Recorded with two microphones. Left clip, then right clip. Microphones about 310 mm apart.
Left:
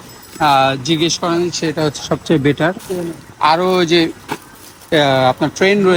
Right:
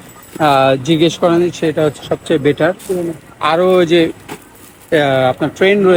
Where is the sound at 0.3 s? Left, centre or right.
Centre.